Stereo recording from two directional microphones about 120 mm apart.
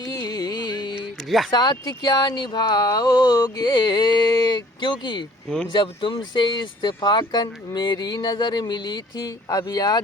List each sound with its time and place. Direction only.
0.0 s carnatic music: 30° left (ahead or behind)
1.5 s speech: 35° left (ahead or behind)